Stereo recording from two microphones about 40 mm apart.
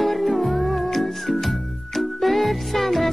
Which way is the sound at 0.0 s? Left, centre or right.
Centre.